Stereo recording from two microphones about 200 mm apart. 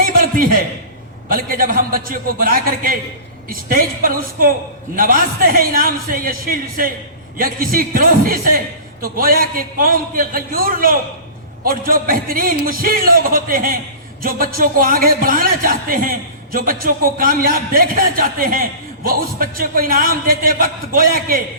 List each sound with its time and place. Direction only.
1.3 s a man's voice: 45° right (ahead or behind)